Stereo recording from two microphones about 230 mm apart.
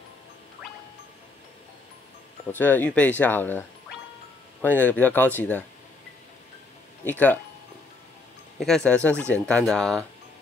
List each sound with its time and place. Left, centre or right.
2.5 s speech: centre
7.1 s speech: centre
8.5 s speech: centre